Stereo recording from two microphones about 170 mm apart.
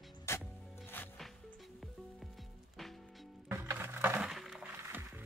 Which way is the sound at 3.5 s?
15° right (ahead or behind).